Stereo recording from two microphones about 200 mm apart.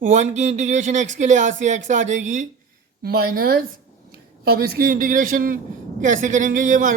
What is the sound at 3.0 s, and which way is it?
A man's voice, 50° right (ahead or behind).